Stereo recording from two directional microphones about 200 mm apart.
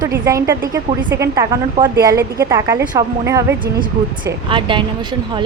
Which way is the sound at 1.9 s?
50° right (ahead or behind).